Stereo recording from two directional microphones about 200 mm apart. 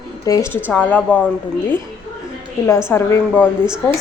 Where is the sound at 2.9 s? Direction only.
10° left (ahead or behind).